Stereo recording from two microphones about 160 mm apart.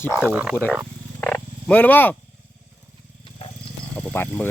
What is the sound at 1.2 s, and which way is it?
Wild animals, 10° left (ahead or behind).